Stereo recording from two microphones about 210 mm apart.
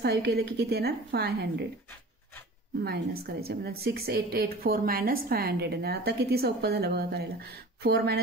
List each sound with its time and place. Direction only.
0.0 s a woman's voice: 50° right (ahead or behind)
2.8 s a woman's voice: 50° right (ahead or behind)